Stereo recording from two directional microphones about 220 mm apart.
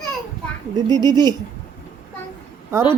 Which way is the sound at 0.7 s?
20° right (ahead or behind).